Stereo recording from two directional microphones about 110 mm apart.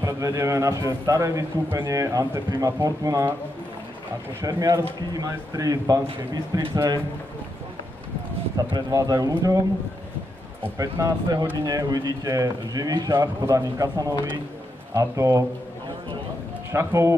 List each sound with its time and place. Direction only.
0.0 s a man's voice: 30° right (ahead or behind)
4.4 s speech: 35° right (ahead or behind)
8.7 s speech: 35° right (ahead or behind)
10.8 s a man's voice: 35° right (ahead or behind)
16.7 s a man's voice: 25° right (ahead or behind)